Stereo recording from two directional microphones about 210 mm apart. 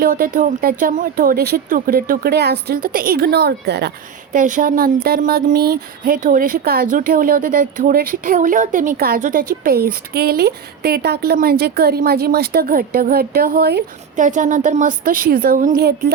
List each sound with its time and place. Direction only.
0.0 s speech: 40° right (ahead or behind)
14.2 s a woman's voice: 35° right (ahead or behind)